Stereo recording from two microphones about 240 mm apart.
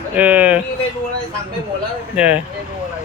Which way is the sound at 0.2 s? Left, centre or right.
Centre.